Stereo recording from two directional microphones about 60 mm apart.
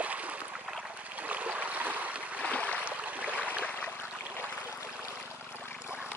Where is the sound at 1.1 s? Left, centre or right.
Right.